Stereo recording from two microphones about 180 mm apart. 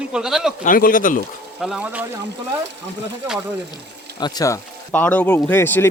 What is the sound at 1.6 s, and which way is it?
Speech, 5° right (ahead or behind).